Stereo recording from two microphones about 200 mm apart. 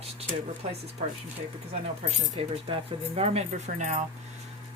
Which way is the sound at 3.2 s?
30° right (ahead or behind).